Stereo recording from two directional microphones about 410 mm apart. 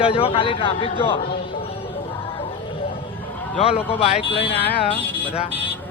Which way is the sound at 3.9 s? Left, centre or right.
Centre.